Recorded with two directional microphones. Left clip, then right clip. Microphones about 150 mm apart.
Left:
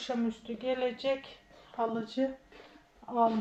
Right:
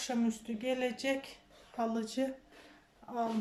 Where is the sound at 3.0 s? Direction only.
Centre (ahead or behind).